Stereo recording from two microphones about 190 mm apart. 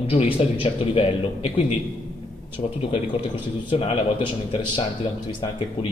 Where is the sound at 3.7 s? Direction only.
30° left (ahead or behind).